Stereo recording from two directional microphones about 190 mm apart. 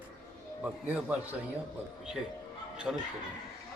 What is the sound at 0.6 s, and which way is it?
Speech, 5° right (ahead or behind).